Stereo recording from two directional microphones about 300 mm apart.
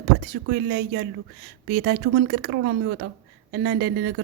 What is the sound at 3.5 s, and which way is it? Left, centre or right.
Speech, right.